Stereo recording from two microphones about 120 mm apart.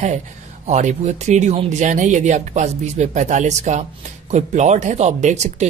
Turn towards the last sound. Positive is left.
turn(degrees=-70)  # may be behind; listen again after turning